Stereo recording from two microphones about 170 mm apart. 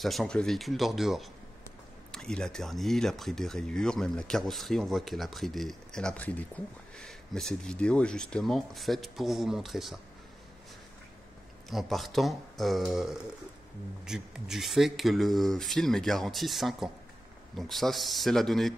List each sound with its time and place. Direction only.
0.0 s speech: centre (ahead or behind)
11.7 s speech: centre (ahead or behind)